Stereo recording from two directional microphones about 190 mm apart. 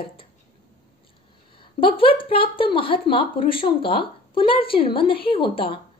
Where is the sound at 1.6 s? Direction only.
25° left (ahead or behind).